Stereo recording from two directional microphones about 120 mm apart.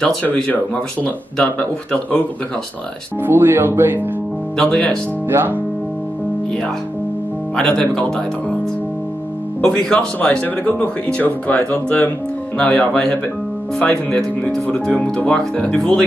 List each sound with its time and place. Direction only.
0.0 s speech: 10° left (ahead or behind)
3.3 s speech: 15° right (ahead or behind)
4.6 s speech: 10° left (ahead or behind)
5.3 s speech: 15° right (ahead or behind)
7.5 s speech: 5° left (ahead or behind)
9.6 s speech: 5° left (ahead or behind)